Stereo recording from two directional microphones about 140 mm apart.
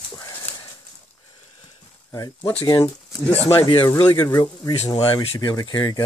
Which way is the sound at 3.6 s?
35° left (ahead or behind).